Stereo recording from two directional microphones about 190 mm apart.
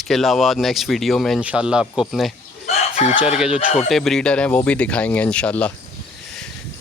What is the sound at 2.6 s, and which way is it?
Chicken, 35° left (ahead or behind).